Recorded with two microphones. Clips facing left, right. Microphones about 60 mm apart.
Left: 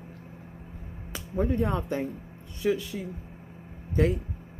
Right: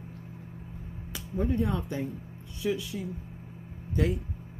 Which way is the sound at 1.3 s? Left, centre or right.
Left.